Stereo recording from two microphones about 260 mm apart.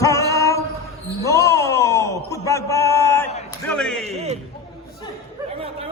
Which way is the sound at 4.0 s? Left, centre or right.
Right.